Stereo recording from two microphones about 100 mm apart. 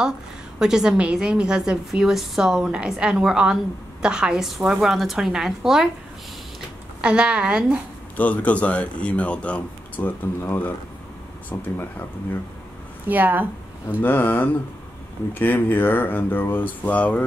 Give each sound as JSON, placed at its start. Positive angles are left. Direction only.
{"t": 0.6, "sound": "a woman's voice", "side_deg": -5}
{"t": 7.0, "sound": "a woman's voice", "side_deg": -10}
{"t": 8.2, "sound": "speech", "side_deg": 15}
{"t": 13.1, "sound": "a woman's voice", "side_deg": -20}
{"t": 14.0, "sound": "speech", "side_deg": 20}